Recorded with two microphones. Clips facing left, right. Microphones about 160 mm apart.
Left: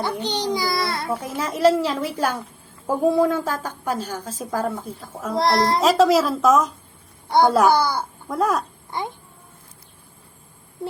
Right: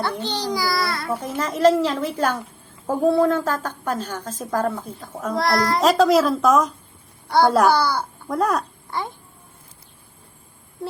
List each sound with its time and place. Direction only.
0.0 s a child's voice: 15° left (ahead or behind)
1.1 s a woman's voice: 10° left (ahead or behind)
5.3 s a child's voice: 25° left (ahead or behind)
5.8 s a woman's voice: centre (ahead or behind)
7.3 s a child's voice: 20° left (ahead or behind)
8.3 s a woman's voice: centre (ahead or behind)
8.9 s a child's voice: 20° left (ahead or behind)